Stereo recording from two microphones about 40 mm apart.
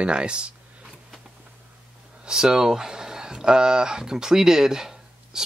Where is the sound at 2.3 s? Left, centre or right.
Centre.